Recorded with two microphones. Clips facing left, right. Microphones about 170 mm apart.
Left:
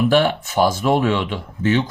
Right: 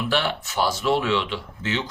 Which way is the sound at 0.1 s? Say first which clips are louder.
Left 8 dB; 50° left (ahead or behind).